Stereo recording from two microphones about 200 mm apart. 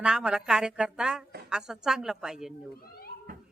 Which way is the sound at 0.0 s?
5° right (ahead or behind).